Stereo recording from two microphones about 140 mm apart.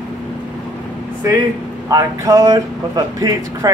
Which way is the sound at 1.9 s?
25° right (ahead or behind).